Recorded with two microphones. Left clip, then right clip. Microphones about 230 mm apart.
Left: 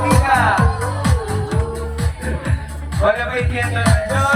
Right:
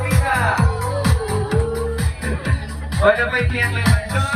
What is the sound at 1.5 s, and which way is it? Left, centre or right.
Music, centre.